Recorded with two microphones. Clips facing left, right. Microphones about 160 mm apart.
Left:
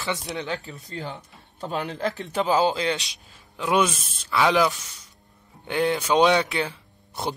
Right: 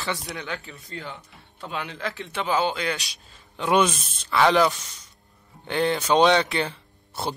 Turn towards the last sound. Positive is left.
turn(degrees=10)  # may be behind; listen again after turning